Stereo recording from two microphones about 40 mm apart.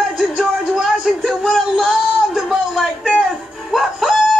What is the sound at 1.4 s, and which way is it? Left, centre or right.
Music, centre.